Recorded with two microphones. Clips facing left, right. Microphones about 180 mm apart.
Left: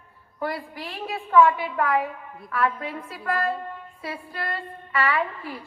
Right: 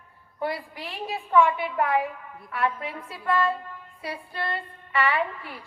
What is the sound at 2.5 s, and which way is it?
A woman's voice, 25° right (ahead or behind).